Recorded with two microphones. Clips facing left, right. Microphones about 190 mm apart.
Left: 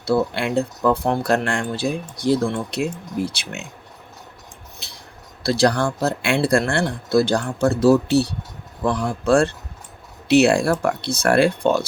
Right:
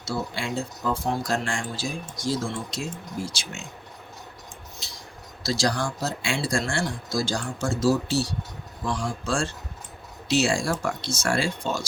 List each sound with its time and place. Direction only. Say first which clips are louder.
0.0 s speech: left 10 dB; 60° left (ahead or behind)
4.8 s a sound: left 1 dB; 60° left (ahead or behind)
5.4 s speech: left 7 dB; 60° left (ahead or behind)